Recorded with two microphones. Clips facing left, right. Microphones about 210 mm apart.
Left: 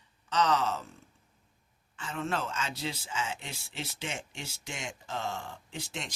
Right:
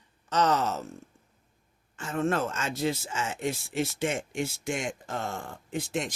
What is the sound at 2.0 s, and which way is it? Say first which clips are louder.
Speech: right 6 dB; 45° right (ahead or behind).